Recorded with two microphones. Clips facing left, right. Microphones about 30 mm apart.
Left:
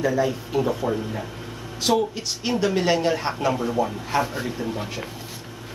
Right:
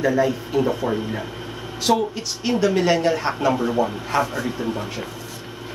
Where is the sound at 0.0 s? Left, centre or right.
Centre.